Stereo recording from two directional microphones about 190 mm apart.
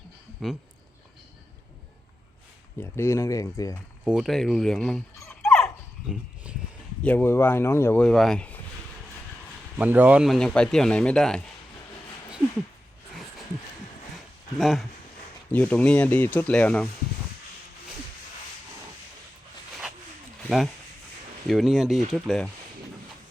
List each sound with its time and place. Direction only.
0.4 s speech: centre (ahead or behind)
2.8 s speech: 15° left (ahead or behind)
4.0 s speech: centre (ahead or behind)
6.1 s a sound: 5° right (ahead or behind)
7.0 s speech: 10° left (ahead or behind)
9.7 s speech: 10° right (ahead or behind)
14.6 s speech: centre (ahead or behind)
21.4 s speech: centre (ahead or behind)